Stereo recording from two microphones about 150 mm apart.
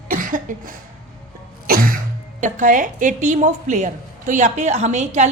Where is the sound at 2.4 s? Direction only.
55° right (ahead or behind).